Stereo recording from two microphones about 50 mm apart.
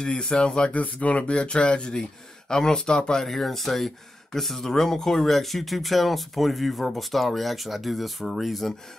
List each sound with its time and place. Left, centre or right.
0.0 s speech: centre
0.7 s speech: left
3.3 s speech: centre